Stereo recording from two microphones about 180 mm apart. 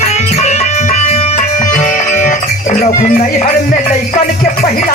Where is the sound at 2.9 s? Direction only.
45° left (ahead or behind).